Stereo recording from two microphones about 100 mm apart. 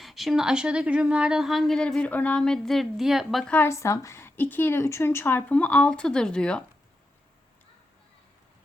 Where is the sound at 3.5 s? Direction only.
25° left (ahead or behind).